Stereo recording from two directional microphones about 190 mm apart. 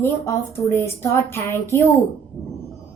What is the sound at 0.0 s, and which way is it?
A child's voice, 15° left (ahead or behind).